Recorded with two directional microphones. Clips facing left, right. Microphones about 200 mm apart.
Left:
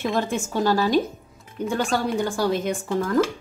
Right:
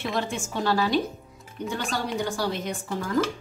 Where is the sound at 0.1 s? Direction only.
40° left (ahead or behind).